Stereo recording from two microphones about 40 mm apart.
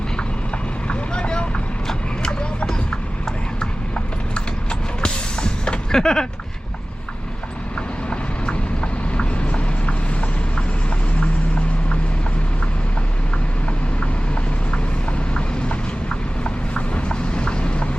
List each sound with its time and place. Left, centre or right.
0.9 s vehicle: left
3.6 s clip-clop: left
5.9 s a sound: centre
8.1 s vehicle: left
15.4 s clip-clop: left